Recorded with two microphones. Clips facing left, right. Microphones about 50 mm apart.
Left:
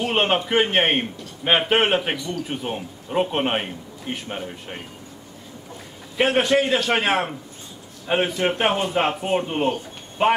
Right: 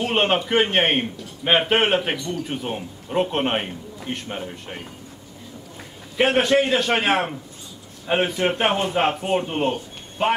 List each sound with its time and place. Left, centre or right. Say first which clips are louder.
0.0 s a sound: even; centre
0.5 s a man's voice: even; centre
6.2 s a man's voice: right 1 dB; centre
10.2 s speech: left 2 dB; centre